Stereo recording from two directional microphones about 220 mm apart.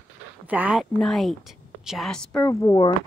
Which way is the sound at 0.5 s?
5° right (ahead or behind).